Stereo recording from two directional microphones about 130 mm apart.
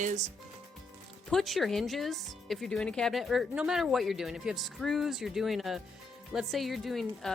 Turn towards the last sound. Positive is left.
turn(degrees=0)  # may be behind; listen again after turning